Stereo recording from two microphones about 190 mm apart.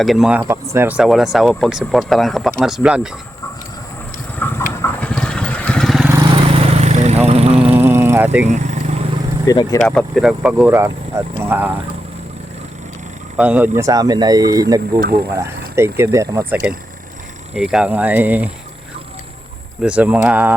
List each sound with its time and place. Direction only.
0.0 s speech: centre (ahead or behind)
4.4 s train: 10° left (ahead or behind)
4.7 s vehicle: 10° left (ahead or behind)
6.3 s lawn mower: 35° right (ahead or behind)
7.3 s vehicle: 35° right (ahead or behind)
7.8 s vehicle: 10° right (ahead or behind)
8.4 s vehicle: 40° right (ahead or behind)
9.5 s speech: 20° left (ahead or behind)
9.8 s speech: 5° left (ahead or behind)
13.3 s speech: 10° right (ahead or behind)
14.9 s speech: 55° right (ahead or behind)
15.3 s speech: 15° right (ahead or behind)
19.8 s speech: 5° right (ahead or behind)